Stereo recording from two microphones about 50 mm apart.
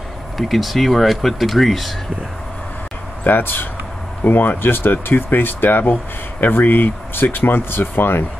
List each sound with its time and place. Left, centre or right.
0.4 s speech: centre
3.3 s speech: left